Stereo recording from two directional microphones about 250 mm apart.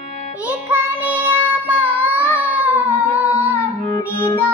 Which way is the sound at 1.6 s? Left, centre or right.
Centre.